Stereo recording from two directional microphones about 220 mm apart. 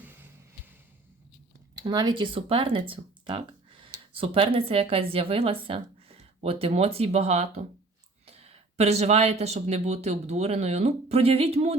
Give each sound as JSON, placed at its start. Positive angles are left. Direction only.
{"t": 1.7, "sound": "speech", "side_deg": -20}